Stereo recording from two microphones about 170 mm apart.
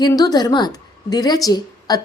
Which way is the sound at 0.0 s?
20° left (ahead or behind).